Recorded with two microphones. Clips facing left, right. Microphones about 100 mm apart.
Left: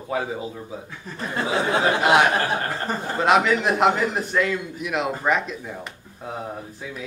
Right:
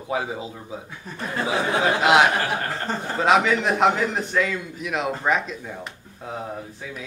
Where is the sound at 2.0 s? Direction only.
20° right (ahead or behind).